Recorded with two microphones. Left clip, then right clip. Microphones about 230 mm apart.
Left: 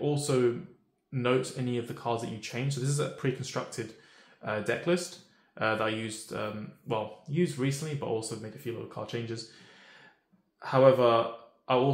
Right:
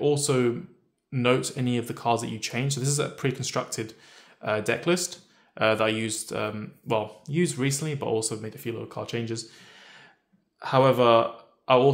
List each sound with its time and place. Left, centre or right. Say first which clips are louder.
0.0 s speech: right 4 dB; right
10.6 s speech: right 2 dB; right